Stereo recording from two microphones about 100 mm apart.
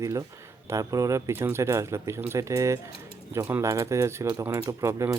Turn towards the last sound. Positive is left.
turn(degrees=-35)  # may be behind; listen again after turning